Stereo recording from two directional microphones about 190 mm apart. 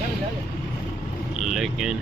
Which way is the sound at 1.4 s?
Centre (ahead or behind).